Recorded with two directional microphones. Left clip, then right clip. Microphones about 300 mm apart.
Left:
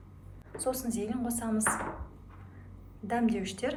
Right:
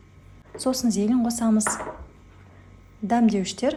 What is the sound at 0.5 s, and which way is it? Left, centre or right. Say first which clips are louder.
A woman's voice: right 8 dB; centre.